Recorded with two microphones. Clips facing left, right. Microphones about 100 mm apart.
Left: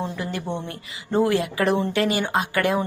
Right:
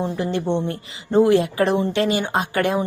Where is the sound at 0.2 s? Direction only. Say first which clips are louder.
Right 7 dB; 25° right (ahead or behind).